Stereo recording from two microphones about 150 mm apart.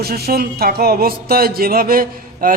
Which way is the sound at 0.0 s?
90° right.